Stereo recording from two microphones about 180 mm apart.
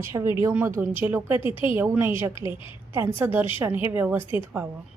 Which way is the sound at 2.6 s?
30° left (ahead or behind).